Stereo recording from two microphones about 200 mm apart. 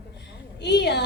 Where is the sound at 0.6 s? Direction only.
60° left (ahead or behind).